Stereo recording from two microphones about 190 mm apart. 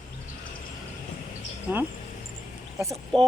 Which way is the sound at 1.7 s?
10° right (ahead or behind).